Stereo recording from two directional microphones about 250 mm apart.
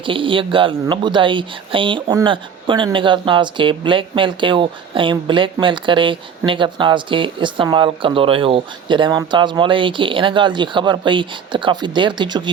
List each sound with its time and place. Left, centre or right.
0.0 s speech: centre